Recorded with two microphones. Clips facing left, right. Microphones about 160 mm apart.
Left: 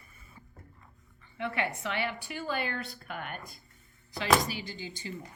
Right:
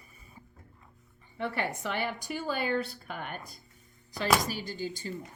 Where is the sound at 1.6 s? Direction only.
40° right (ahead or behind).